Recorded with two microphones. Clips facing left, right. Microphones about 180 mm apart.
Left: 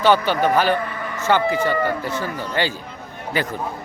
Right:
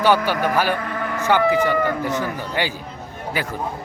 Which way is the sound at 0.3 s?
10° right (ahead or behind).